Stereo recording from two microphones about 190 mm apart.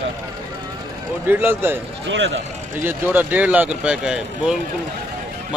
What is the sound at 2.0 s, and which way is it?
Speech, 75° right (ahead or behind).